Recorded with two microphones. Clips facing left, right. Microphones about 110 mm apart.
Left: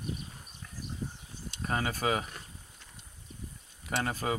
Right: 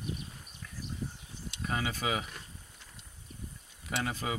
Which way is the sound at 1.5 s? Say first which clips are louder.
Left 2 dB; 45° left (ahead or behind).